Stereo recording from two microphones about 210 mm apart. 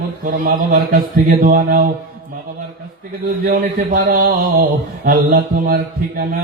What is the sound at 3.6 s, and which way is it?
Mantra, 40° right (ahead or behind).